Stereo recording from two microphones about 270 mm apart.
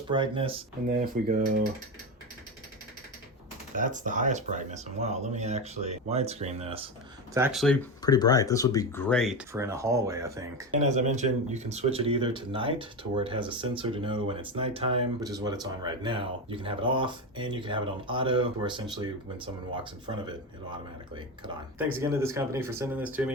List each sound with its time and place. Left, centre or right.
0.1 s speech: centre
3.8 s speech: right
7.3 s speech: centre
8.0 s speech: centre
9.5 s speech: centre
10.7 s speech: right
21.9 s speech: centre